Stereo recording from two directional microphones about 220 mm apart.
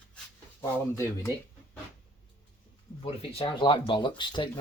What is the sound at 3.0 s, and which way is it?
Speech, 25° left (ahead or behind).